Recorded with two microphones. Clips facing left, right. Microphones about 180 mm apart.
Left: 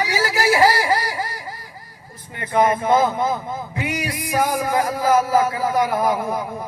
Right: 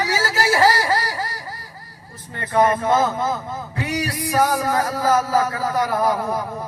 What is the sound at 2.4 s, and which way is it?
Music, 15° left (ahead or behind).